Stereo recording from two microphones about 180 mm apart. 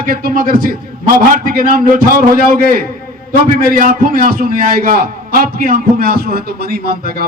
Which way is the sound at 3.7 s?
50° right (ahead or behind).